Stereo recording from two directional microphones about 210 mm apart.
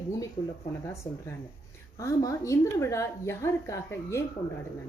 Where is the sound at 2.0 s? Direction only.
15° left (ahead or behind).